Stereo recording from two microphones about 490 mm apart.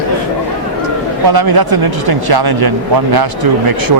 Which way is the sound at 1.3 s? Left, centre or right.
Right.